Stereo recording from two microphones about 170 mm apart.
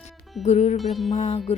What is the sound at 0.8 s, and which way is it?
Music, centre (ahead or behind).